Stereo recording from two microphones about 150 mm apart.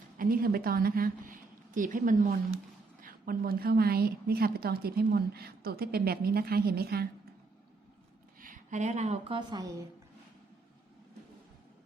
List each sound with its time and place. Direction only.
0.2 s a woman's voice: 75° right (ahead or behind)
3.0 s a woman's voice: 75° right (ahead or behind); by 7.1 s 90° right
8.4 s speech: 60° right (ahead or behind); by 9.8 s 25° right (ahead or behind)